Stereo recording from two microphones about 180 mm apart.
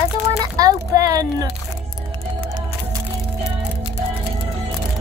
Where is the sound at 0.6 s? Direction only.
20° right (ahead or behind).